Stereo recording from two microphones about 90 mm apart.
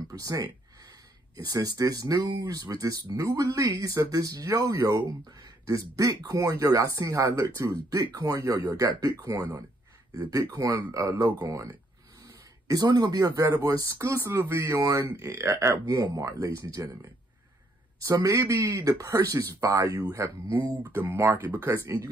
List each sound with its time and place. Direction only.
0.1 s speech: 40° right (ahead or behind)
18.0 s speech: 40° right (ahead or behind)